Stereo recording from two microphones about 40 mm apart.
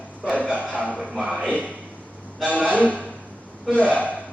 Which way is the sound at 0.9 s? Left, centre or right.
Centre.